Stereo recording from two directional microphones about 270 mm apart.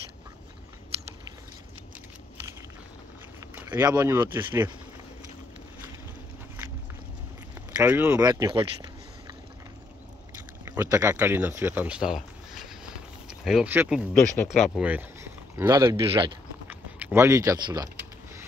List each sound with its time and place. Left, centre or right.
3.5 s speech: centre
7.7 s speech: centre
10.6 s speech: centre
14.1 s speech: centre
14.6 s speech: centre
16.6 s a sound: centre